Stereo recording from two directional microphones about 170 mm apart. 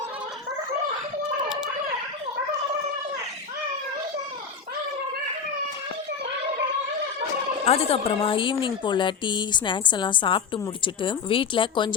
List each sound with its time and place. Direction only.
7.6 s a woman's voice: 35° left (ahead or behind)